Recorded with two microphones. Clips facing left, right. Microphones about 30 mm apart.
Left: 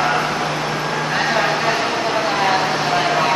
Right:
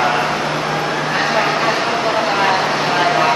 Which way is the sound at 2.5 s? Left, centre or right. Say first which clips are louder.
Right 1 dB; centre.